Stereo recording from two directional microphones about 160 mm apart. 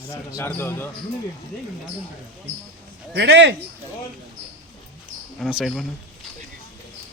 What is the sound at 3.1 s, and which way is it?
Speech, 90° right.